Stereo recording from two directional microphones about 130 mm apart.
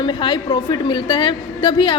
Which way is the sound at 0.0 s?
35° left (ahead or behind).